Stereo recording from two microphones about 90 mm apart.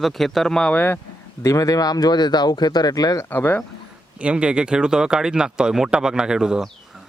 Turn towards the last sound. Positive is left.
turn(degrees=-5)  # may be behind; listen again after turning